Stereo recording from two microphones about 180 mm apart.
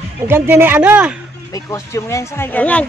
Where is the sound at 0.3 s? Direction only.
10° right (ahead or behind).